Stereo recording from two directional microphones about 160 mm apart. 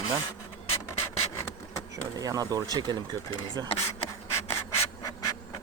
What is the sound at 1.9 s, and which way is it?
Speech, 20° right (ahead or behind).